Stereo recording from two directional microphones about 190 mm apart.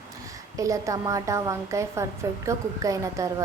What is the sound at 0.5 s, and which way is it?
A woman's voice, 15° right (ahead or behind).